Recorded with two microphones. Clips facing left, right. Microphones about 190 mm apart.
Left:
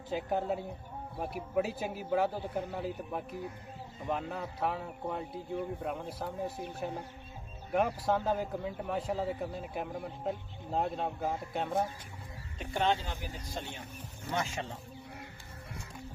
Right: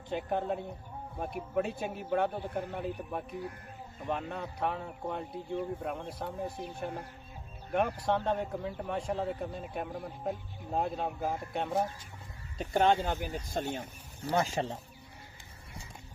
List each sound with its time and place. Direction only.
0.1 s speech: 5° left (ahead or behind)
12.5 s speech: 45° right (ahead or behind)